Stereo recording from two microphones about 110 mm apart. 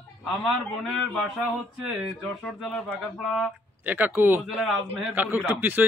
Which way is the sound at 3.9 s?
15° right (ahead or behind).